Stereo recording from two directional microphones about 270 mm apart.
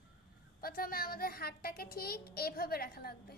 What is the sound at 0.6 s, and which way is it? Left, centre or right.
A child's voice, left.